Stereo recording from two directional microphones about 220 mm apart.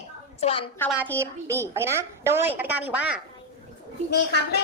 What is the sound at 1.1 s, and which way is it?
A woman's voice, 10° right (ahead or behind).